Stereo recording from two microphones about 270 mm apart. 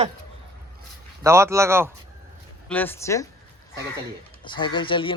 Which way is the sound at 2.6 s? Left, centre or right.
Centre.